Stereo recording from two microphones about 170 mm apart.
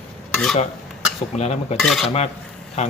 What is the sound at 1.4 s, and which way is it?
Speech, 40° left (ahead or behind).